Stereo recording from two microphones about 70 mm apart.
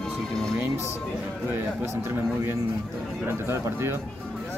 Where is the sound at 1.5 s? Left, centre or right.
Right.